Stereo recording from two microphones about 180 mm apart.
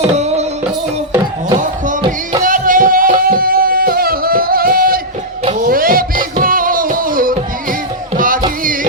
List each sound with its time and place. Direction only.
0.1 s music: 40° right (ahead or behind)
2.0 s music: 25° right (ahead or behind)
2.4 s music: 50° right (ahead or behind)